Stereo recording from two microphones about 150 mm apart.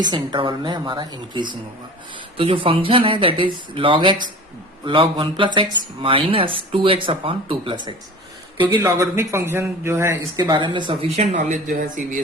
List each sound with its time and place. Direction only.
0.0 s speech: 30° right (ahead or behind)
8.7 s speech: 25° right (ahead or behind); by 12.0 s 55° right (ahead or behind)